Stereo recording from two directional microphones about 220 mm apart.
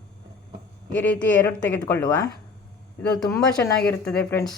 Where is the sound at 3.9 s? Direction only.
10° left (ahead or behind).